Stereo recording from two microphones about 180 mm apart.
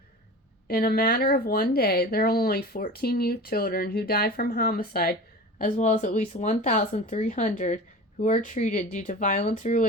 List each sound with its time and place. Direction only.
0.7 s speech: 55° left (ahead or behind)
5.5 s speech: 45° left (ahead or behind)